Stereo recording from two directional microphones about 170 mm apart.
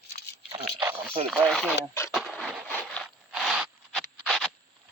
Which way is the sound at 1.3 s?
Centre (ahead or behind).